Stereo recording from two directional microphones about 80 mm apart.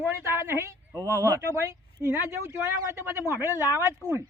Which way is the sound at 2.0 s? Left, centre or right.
Right.